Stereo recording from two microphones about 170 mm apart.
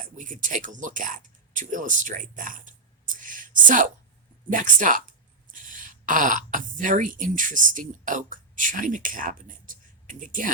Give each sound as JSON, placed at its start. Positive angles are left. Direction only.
{"t": 0.0, "sound": "speech", "side_deg": -50}